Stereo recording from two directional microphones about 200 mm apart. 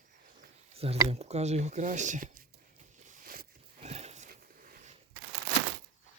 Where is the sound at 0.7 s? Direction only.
30° right (ahead or behind); by 3.6 s 45° right (ahead or behind).